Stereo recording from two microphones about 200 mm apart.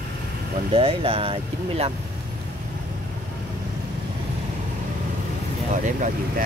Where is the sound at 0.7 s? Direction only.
30° right (ahead or behind).